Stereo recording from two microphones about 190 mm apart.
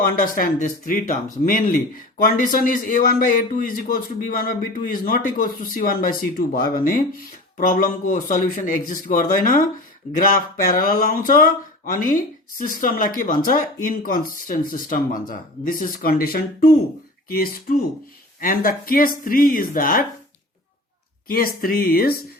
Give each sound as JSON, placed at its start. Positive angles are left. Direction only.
{"t": 0.2, "sound": "speech", "side_deg": 45}
{"t": 21.2, "sound": "speech", "side_deg": 50}